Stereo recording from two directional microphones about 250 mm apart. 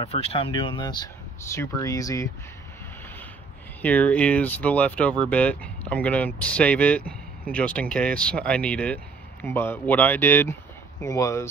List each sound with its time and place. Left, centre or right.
0.0 s speech: left
3.8 s speech: centre